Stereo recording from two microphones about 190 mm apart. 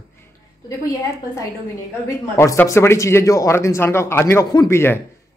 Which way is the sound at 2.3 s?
15° left (ahead or behind).